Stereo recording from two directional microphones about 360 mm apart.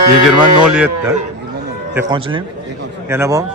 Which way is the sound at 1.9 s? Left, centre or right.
Centre.